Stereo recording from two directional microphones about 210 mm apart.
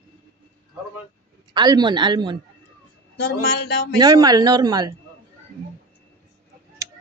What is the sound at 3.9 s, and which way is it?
Speech, 20° right (ahead or behind).